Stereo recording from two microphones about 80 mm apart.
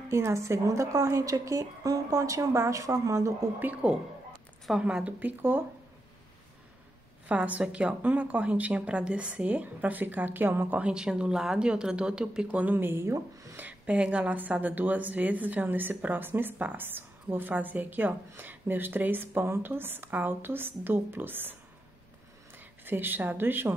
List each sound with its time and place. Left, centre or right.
0.1 s a woman's voice: right
3.5 s speech: right
4.6 s speech: centre
7.2 s speech: centre
10.8 s speech: centre; by 13.6 s right
13.6 s speech: centre
22.6 s a woman's voice: right